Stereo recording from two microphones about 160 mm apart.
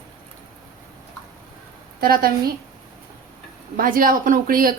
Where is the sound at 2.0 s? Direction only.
70° right (ahead or behind).